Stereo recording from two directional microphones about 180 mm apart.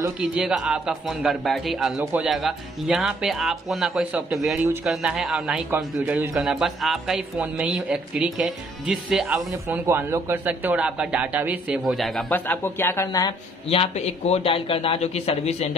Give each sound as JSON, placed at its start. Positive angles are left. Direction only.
{"t": 0.2, "sound": "a man's voice", "side_deg": -5}
{"t": 13.7, "sound": "a man's voice", "side_deg": 35}